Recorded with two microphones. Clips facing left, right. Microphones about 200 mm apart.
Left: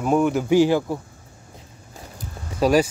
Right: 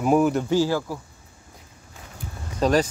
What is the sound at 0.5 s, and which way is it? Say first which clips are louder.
Speech: left 5 dB; 20° left (ahead or behind).